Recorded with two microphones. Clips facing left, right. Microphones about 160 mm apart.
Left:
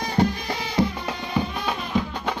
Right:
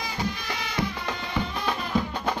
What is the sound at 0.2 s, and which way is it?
Music, 60° left (ahead or behind).